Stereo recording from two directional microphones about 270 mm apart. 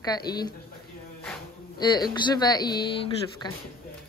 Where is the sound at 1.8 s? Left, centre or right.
Centre.